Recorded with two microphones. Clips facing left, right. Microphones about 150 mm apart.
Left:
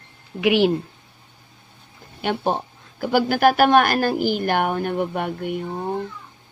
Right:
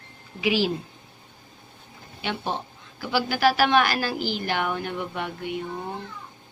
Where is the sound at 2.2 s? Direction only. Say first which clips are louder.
Left 7 dB; 50° left (ahead or behind).